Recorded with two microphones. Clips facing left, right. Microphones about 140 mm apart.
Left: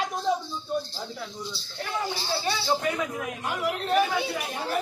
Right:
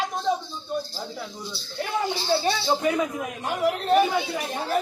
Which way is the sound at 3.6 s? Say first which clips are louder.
Right 4 dB; 30° right (ahead or behind).